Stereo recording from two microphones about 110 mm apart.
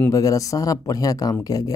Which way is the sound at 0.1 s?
30° left (ahead or behind).